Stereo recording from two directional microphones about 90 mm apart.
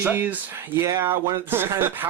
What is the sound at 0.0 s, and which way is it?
Speech, 20° right (ahead or behind).